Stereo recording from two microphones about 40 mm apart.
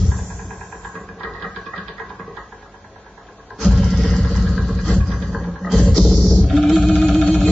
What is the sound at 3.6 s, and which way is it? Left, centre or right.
Vehicle, left.